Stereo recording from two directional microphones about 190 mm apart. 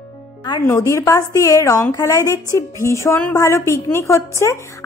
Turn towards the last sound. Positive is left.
turn(degrees=15)  # may be behind; listen again after turning